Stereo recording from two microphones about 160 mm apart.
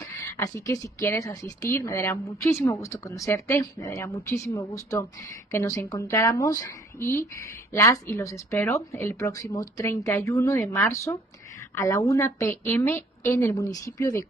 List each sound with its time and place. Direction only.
0.1 s a woman's voice: 20° left (ahead or behind)